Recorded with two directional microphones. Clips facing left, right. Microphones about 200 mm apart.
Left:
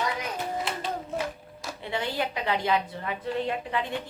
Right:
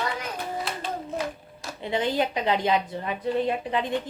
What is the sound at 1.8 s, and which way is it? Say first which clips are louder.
A woman's voice: right 5 dB; 20° right (ahead or behind).